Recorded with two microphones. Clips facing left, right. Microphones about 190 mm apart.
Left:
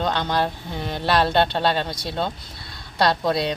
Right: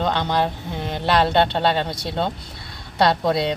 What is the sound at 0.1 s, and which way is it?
Speech, 20° right (ahead or behind).